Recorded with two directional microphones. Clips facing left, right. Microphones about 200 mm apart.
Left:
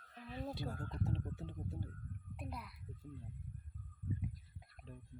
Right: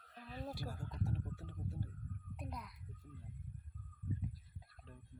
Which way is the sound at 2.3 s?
5° left (ahead or behind).